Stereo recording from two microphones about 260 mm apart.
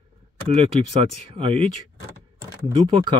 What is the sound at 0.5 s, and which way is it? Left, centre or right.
Speech, right.